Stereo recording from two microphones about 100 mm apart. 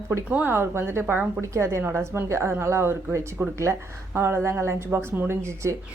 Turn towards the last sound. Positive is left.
turn(degrees=-30)  # may be behind; listen again after turning